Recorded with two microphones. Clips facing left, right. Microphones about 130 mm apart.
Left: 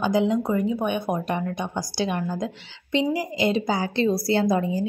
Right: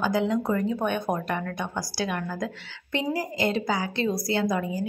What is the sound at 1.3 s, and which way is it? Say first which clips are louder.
A woman's voice: left 3 dB; 20° left (ahead or behind).